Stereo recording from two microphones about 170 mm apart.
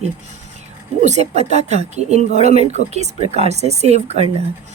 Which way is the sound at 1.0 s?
40° right (ahead or behind).